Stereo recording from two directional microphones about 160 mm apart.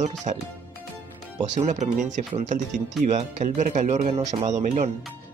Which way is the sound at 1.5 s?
45° right (ahead or behind).